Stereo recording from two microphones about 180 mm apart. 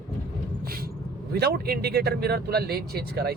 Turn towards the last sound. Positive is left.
turn(degrees=-60)  # may be behind; listen again after turning